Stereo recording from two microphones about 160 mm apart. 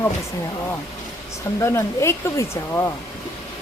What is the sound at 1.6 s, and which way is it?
Speech, 15° left (ahead or behind).